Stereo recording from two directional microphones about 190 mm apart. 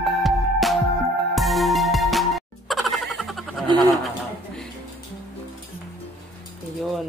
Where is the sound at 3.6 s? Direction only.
20° right (ahead or behind).